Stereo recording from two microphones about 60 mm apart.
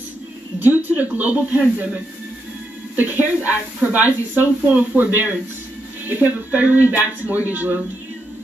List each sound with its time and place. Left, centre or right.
0.6 s speech: right
3.0 s speech: right